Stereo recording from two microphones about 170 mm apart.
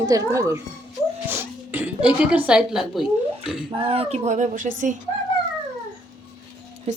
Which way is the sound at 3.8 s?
35° right (ahead or behind).